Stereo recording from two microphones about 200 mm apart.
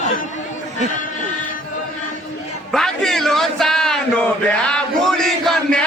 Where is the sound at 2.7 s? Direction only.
Centre (ahead or behind).